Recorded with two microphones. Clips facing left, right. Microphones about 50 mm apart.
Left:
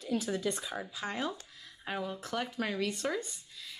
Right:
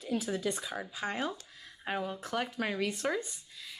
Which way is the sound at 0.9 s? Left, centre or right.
Centre.